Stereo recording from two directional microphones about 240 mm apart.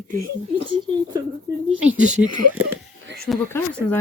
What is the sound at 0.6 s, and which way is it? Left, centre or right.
Speech, right.